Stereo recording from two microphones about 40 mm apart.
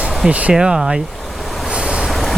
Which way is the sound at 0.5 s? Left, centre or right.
Right.